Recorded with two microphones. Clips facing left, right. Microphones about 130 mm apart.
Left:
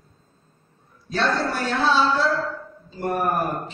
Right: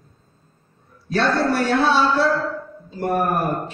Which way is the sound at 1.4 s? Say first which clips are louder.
Right 5 dB; 60° right (ahead or behind).